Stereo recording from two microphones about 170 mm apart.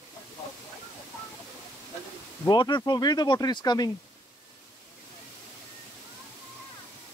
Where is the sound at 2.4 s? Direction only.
25° left (ahead or behind).